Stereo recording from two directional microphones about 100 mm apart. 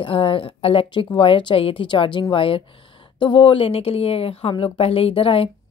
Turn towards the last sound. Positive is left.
turn(degrees=65)  # may be behind; listen again after turning